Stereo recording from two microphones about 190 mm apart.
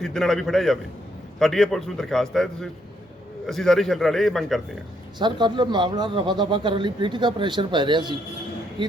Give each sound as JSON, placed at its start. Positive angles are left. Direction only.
{"t": 0.0, "sound": "a man's voice", "side_deg": 0}
{"t": 5.2, "sound": "speech", "side_deg": -25}